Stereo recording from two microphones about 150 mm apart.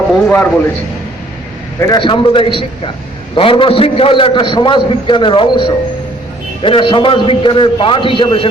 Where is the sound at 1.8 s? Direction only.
30° left (ahead or behind).